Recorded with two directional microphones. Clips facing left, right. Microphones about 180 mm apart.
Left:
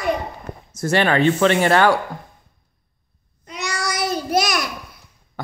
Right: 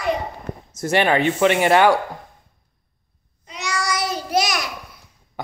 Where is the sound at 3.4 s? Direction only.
60° left (ahead or behind).